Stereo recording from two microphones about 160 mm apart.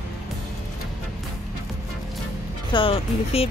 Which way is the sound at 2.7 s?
35° left (ahead or behind).